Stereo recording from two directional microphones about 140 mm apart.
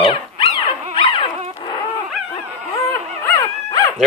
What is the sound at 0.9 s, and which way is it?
Dog, 35° left (ahead or behind).